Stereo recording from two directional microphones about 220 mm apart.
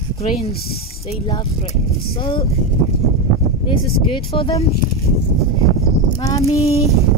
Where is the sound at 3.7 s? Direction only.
25° left (ahead or behind).